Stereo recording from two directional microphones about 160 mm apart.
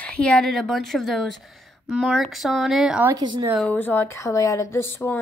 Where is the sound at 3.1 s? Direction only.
25° right (ahead or behind).